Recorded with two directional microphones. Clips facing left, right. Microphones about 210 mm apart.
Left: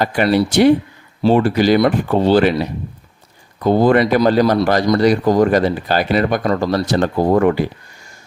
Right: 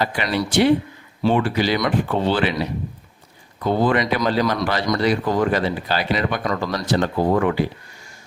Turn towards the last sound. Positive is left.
turn(degrees=45)  # may be behind; listen again after turning